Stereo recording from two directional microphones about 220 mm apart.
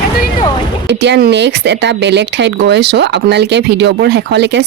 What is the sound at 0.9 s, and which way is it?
Speech, 50° right (ahead or behind).